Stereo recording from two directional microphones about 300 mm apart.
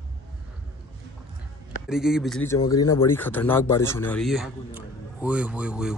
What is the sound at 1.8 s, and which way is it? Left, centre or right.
Speech, centre.